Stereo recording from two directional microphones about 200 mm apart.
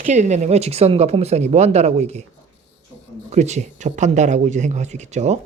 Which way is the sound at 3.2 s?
35° right (ahead or behind).